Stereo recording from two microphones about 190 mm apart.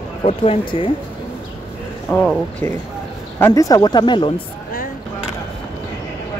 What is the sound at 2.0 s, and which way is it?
Speech, 10° left (ahead or behind).